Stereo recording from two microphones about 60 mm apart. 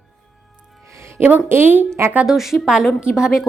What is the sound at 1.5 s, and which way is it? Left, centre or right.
Speech, right.